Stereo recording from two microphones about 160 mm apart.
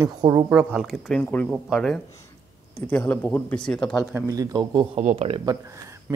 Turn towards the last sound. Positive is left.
turn(degrees=-20)  # may be behind; listen again after turning